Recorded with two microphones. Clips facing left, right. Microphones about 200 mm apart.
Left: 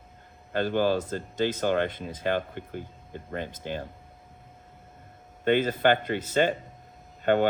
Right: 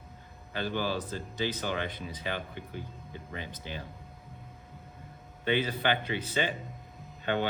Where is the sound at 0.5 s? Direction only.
50° left (ahead or behind).